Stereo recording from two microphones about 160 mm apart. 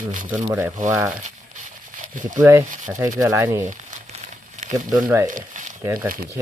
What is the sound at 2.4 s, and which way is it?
Speech, 15° right (ahead or behind).